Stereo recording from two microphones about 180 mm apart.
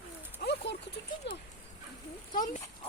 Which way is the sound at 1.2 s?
75° left (ahead or behind).